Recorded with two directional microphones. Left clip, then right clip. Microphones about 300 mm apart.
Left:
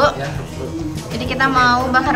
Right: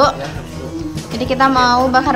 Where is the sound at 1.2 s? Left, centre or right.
Centre.